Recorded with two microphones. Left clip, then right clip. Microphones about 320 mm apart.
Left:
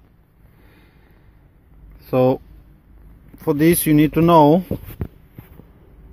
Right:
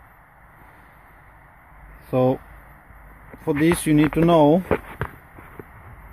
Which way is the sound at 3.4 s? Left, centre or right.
Centre.